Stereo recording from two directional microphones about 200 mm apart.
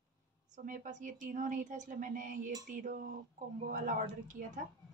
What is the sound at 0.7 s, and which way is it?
Speech, 40° right (ahead or behind).